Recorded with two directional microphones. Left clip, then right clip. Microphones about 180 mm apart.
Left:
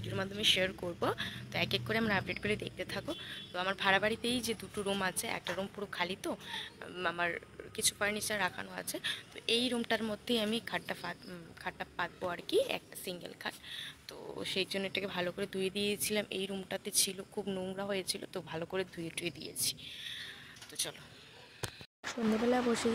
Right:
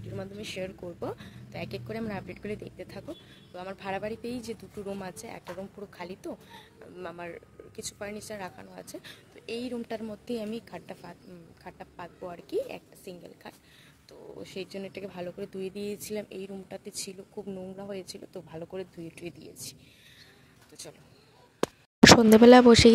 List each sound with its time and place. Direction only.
0.0 s speech: 10° right (ahead or behind)
0.7 s speech: 10° left (ahead or behind)
1.0 s a woman's voice: 10° right (ahead or behind)
22.0 s speech: 55° right (ahead or behind)